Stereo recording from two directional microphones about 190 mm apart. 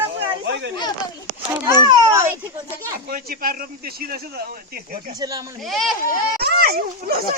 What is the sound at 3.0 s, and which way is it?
Speech, 50° right (ahead or behind).